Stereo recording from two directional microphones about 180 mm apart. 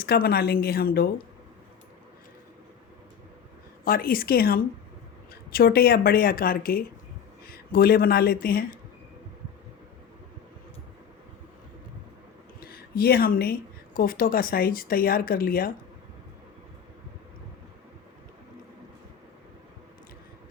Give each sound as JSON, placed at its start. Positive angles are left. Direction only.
{"t": 0.0, "sound": "speech", "side_deg": 60}
{"t": 3.8, "sound": "speech", "side_deg": 55}
{"t": 12.5, "sound": "speech", "side_deg": 60}